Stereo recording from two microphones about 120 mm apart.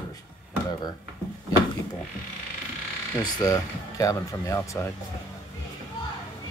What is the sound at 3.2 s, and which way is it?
Speech, 30° left (ahead or behind).